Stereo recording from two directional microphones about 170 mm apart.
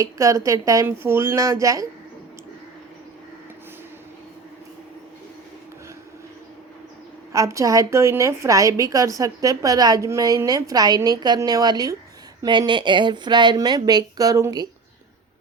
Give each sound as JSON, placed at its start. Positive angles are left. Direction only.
{"t": 0.0, "sound": "a woman's voice", "side_deg": -20}
{"t": 7.3, "sound": "a woman's voice", "side_deg": -20}